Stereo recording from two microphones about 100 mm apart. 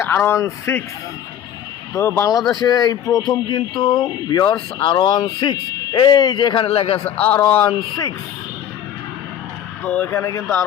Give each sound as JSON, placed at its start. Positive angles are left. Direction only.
{"t": 0.0, "sound": "a man's voice", "side_deg": 25}
{"t": 1.9, "sound": "speech", "side_deg": 30}
{"t": 6.7, "sound": "a man's voice", "side_deg": 75}
{"t": 7.0, "sound": "a man's voice", "side_deg": 15}
{"t": 9.8, "sound": "a man's voice", "side_deg": 15}
{"t": 10.1, "sound": "speech", "side_deg": 30}